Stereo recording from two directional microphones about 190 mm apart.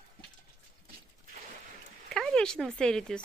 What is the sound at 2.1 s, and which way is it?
Speech, 5° left (ahead or behind).